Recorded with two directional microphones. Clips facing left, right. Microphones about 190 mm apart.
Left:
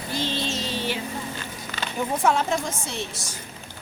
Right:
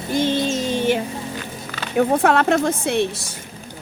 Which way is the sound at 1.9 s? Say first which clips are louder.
Right 7 dB; 65° right (ahead or behind).